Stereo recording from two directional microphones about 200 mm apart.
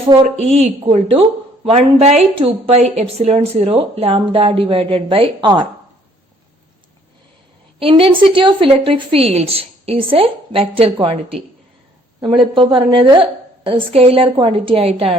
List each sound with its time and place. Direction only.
0.1 s a woman's voice: 30° right (ahead or behind)
7.8 s a woman's voice: 25° right (ahead or behind)
12.5 s a woman's voice: 25° right (ahead or behind)